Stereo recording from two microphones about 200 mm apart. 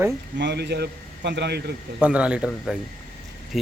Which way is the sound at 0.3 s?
60° right (ahead or behind).